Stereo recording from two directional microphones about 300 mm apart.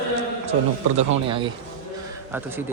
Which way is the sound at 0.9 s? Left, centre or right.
Centre.